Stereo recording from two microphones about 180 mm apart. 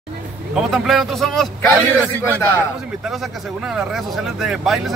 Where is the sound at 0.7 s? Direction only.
Centre (ahead or behind).